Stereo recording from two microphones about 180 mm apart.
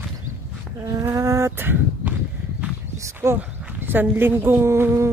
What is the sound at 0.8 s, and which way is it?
A woman's voice, 15° right (ahead or behind).